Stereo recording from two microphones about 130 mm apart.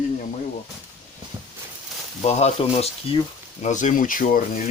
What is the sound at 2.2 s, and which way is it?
Speech, 55° left (ahead or behind).